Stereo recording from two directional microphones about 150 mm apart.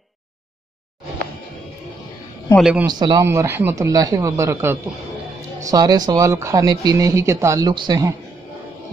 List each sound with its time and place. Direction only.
2.5 s speech: 5° right (ahead or behind)
2.9 s speech: 30° right (ahead or behind)
3.3 s speech: 15° right (ahead or behind)